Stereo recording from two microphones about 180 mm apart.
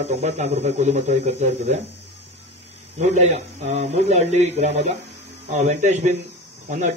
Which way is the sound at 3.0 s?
40° right (ahead or behind).